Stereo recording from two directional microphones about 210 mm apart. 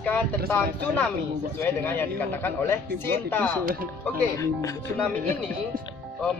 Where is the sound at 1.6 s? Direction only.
10° left (ahead or behind).